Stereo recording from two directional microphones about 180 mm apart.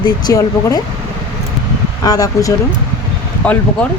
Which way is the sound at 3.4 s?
10° left (ahead or behind).